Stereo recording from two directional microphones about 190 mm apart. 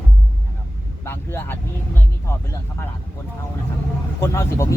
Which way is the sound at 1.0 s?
10° left (ahead or behind).